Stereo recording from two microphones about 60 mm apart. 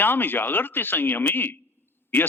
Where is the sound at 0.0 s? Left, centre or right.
Left.